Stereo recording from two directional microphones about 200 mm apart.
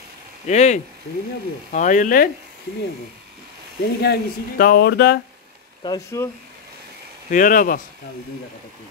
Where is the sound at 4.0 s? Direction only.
50° left (ahead or behind).